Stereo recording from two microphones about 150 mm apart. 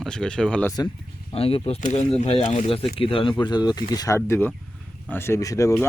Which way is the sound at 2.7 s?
40° left (ahead or behind).